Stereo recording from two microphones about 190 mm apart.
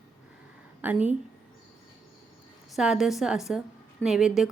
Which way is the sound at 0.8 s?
10° right (ahead or behind).